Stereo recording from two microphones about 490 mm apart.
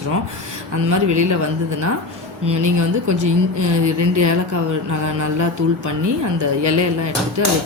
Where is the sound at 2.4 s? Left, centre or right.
Right.